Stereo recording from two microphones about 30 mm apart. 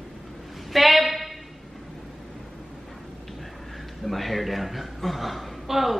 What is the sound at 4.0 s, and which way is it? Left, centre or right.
A woman's voice, centre.